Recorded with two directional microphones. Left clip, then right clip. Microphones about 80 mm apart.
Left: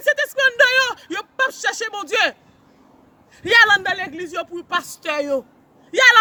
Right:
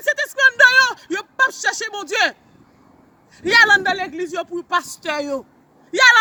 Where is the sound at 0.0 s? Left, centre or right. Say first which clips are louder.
Right 1 dB; left.